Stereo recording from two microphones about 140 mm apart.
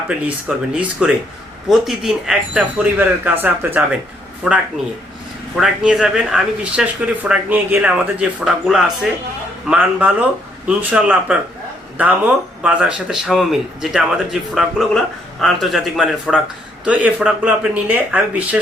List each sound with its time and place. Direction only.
0.3 s speech: 10° right (ahead or behind)
5.5 s speech: centre (ahead or behind)